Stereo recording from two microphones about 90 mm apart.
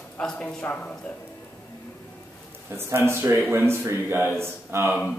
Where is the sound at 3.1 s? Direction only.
25° right (ahead or behind).